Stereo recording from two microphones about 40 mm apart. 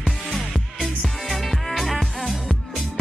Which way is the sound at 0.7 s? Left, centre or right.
Centre.